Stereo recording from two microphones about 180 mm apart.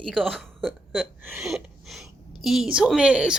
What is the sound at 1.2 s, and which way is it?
Speech, 10° right (ahead or behind).